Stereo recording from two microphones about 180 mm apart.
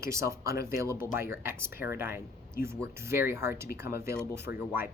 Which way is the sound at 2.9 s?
15° right (ahead or behind).